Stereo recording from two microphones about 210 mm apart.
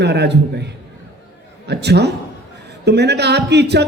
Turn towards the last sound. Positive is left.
turn(degrees=-55)  # may be behind; listen again after turning